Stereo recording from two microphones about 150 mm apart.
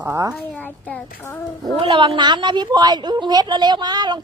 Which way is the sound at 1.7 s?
35° right (ahead or behind).